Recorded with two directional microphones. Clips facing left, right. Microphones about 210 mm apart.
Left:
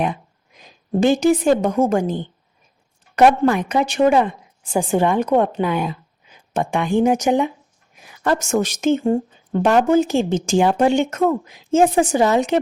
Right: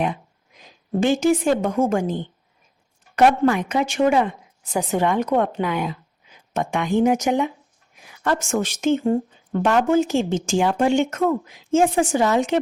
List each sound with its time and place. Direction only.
0.9 s speech: 40° left (ahead or behind)
3.5 s a woman's voice: 35° left (ahead or behind)
9.0 s speech: 30° left (ahead or behind)